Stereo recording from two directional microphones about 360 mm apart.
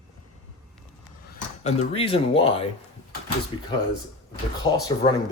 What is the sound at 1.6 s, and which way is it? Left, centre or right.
Speech, centre.